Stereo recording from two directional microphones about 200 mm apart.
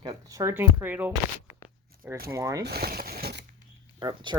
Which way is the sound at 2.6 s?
50° right (ahead or behind).